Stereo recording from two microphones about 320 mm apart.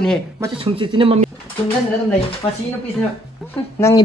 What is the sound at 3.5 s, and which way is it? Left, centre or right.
Speech, centre.